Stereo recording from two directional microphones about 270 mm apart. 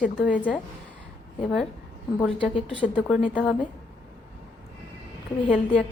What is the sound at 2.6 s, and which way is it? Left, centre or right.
A woman's voice, centre.